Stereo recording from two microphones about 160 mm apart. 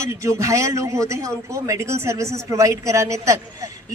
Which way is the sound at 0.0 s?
20° right (ahead or behind).